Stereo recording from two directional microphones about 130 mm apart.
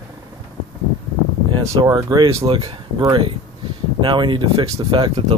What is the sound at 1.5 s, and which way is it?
Speech, 35° right (ahead or behind).